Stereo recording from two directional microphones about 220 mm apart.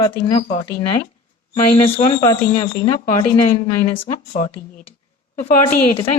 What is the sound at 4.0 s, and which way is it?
Speech, 35° left (ahead or behind).